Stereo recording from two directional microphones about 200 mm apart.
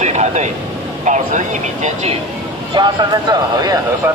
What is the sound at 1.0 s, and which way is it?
Speech, 35° right (ahead or behind).